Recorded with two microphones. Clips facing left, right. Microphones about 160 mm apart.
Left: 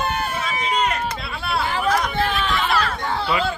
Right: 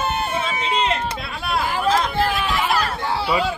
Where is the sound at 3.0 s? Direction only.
5° right (ahead or behind).